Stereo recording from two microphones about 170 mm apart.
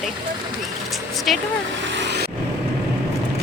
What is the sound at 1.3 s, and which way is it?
Speech, centre (ahead or behind).